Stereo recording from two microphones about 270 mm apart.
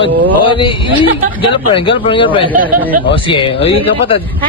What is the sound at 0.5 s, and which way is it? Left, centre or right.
A man's voice, centre.